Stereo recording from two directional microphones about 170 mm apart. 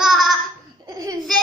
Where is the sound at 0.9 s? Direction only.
20° right (ahead or behind).